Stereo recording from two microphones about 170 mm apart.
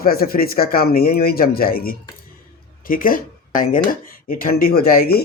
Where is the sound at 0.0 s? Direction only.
60° left (ahead or behind).